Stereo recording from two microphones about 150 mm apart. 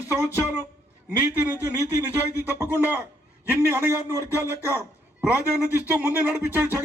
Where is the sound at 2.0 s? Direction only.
15° right (ahead or behind).